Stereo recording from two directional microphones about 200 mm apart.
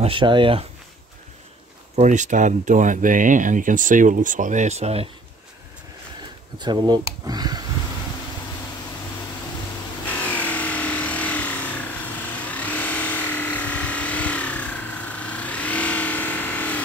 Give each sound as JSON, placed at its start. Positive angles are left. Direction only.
{"t": 0.0, "sound": "speech", "side_deg": -25}
{"t": 2.0, "sound": "speech", "side_deg": -35}
{"t": 6.6, "sound": "speech", "side_deg": -20}
{"t": 10.0, "sound": "vehicle", "side_deg": 5}